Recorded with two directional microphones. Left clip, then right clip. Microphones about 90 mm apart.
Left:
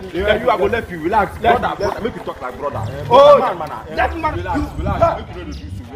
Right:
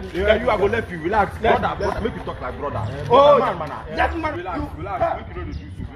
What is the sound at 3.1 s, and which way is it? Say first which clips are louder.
Speech: left 5 dB; 40° left (ahead or behind).